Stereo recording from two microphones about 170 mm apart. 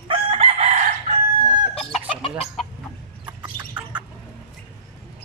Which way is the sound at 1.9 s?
35° left (ahead or behind).